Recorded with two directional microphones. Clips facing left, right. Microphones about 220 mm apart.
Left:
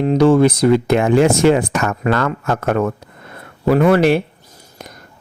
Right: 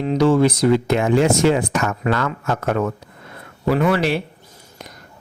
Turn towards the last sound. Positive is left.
turn(degrees=50)  # may be behind; listen again after turning